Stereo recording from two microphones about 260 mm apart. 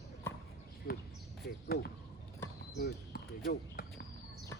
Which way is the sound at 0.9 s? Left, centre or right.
Left.